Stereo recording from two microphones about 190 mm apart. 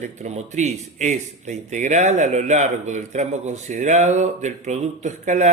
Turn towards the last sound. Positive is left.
turn(degrees=-40)  # may be behind; listen again after turning